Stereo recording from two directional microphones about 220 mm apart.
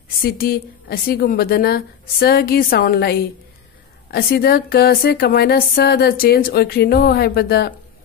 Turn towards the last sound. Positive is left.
turn(degrees=45)  # may be behind; listen again after turning